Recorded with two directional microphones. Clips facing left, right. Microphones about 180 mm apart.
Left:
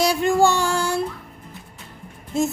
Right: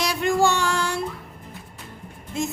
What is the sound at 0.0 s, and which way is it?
Music, 35° left (ahead or behind).